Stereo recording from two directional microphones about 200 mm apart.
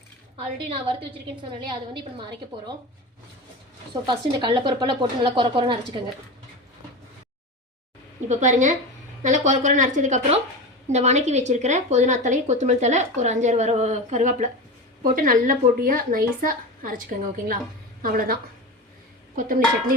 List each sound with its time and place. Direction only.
0.3 s a woman's voice: 25° right (ahead or behind)
4.0 s a woman's voice: 25° right (ahead or behind)
8.3 s a woman's voice: 35° right (ahead or behind)
19.4 s a woman's voice: 45° right (ahead or behind)